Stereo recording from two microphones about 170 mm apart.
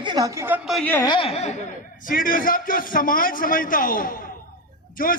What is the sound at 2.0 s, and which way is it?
A man's voice, 55° left (ahead or behind).